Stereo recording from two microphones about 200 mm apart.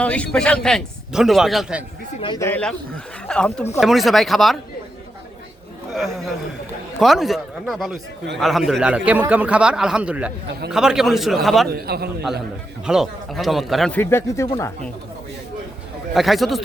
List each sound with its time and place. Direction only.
0.0 s a man's voice: 5° left (ahead or behind)
2.2 s speech: 20° left (ahead or behind)
2.5 s a man's voice: 5° left (ahead or behind)
7.0 s a man's voice: centre (ahead or behind)
11.7 s a man's voice: 50° right (ahead or behind)
12.8 s a man's voice: 5° right (ahead or behind); by 14.7 s 15° left (ahead or behind)
16.1 s a man's voice: centre (ahead or behind)